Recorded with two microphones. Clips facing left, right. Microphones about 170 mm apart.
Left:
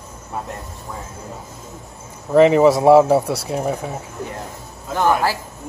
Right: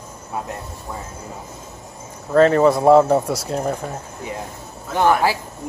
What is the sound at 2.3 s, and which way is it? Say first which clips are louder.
Speech: left 2 dB; 10° left (ahead or behind).